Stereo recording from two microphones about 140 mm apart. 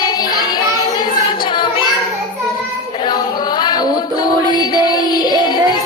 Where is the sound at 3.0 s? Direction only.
30° left (ahead or behind).